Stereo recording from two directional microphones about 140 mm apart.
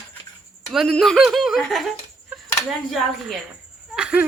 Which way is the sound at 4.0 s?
5° right (ahead or behind).